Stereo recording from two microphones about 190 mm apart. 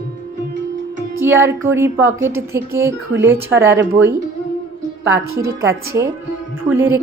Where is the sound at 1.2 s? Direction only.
15° right (ahead or behind).